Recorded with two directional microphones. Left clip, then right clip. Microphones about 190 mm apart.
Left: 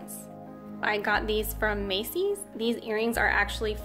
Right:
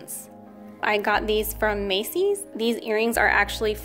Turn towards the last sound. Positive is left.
turn(degrees=-35)  # may be behind; listen again after turning